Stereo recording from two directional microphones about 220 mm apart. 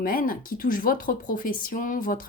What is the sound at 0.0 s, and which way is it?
Speech, 40° left (ahead or behind).